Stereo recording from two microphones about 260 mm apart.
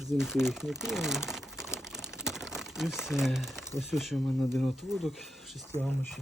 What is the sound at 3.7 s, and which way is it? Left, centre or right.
Speech, centre.